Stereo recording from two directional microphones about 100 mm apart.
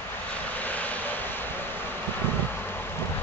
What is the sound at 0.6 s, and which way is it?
Vehicle, 15° left (ahead or behind).